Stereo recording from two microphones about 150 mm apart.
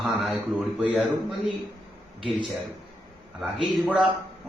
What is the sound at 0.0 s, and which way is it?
Speech, centre (ahead or behind).